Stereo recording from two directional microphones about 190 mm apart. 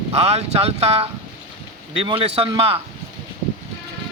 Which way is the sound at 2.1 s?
30° right (ahead or behind).